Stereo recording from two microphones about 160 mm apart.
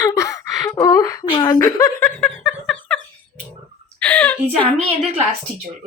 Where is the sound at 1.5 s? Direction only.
15° left (ahead or behind).